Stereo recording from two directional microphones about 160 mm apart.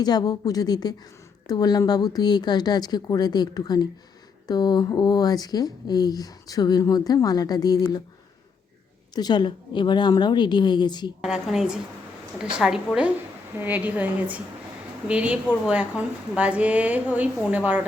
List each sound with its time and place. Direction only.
0.0 s speech: 25° left (ahead or behind)
9.1 s speech: 25° left (ahead or behind)
11.2 s a woman's voice: 5° right (ahead or behind)